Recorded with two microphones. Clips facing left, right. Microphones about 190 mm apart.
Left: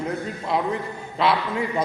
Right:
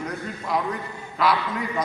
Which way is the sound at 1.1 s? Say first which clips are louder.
Left 1 dB; 25° left (ahead or behind).